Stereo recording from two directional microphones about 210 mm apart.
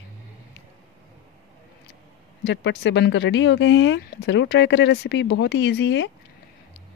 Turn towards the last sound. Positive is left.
turn(degrees=55)  # may be behind; listen again after turning